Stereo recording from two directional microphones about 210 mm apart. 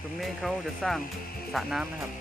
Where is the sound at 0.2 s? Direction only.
Centre (ahead or behind).